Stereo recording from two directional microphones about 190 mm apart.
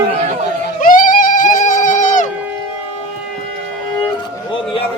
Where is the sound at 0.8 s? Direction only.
45° left (ahead or behind).